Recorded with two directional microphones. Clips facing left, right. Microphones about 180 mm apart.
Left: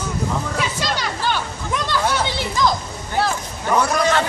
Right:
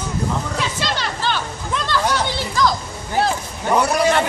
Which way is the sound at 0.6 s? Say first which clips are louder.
Even; 10° left (ahead or behind).